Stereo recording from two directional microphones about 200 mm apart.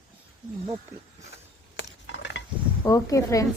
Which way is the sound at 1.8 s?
65° left (ahead or behind).